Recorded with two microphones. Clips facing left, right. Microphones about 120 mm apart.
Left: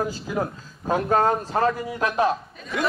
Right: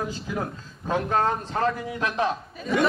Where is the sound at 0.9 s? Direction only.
45° left (ahead or behind).